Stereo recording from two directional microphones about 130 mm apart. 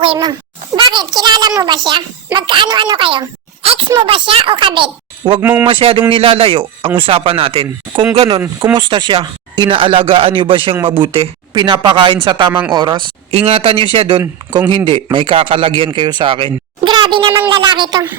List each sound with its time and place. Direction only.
0.0 s a child's voice: 40° right (ahead or behind)
5.4 s speech: 15° right (ahead or behind)
5.6 s a child's voice: 45° right (ahead or behind)
11.5 s a child's voice: 35° right (ahead or behind)
13.3 s a child's voice: 50° right (ahead or behind)